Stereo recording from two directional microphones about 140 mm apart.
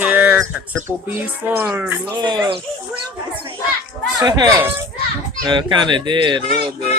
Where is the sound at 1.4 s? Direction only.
15° right (ahead or behind).